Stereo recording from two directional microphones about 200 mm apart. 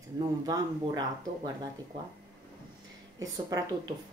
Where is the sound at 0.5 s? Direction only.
20° right (ahead or behind).